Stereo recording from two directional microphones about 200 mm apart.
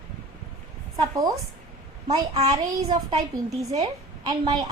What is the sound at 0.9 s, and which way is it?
A woman's voice, 20° right (ahead or behind).